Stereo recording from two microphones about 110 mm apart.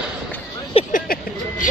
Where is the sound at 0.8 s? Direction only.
60° left (ahead or behind).